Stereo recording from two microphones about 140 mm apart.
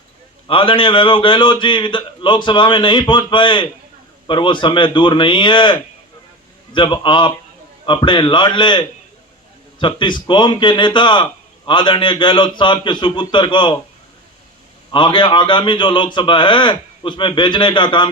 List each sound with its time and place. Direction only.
0.4 s a man's voice: 40° left (ahead or behind)
9.8 s a man's voice: 35° left (ahead or behind)
14.9 s a man's voice: 35° left (ahead or behind)